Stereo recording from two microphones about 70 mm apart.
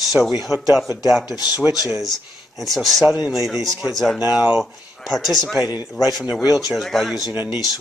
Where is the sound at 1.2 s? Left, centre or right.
Left.